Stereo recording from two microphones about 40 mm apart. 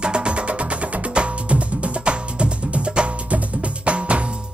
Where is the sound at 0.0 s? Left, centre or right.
Right.